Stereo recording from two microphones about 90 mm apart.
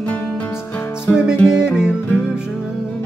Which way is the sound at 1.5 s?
10° right (ahead or behind).